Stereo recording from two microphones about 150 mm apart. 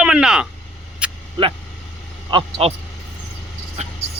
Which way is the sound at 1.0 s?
10° right (ahead or behind).